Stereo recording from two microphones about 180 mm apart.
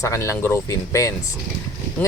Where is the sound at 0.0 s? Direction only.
15° left (ahead or behind).